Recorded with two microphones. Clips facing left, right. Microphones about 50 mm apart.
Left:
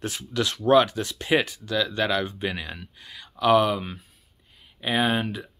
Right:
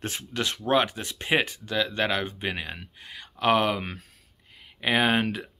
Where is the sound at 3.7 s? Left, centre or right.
Right.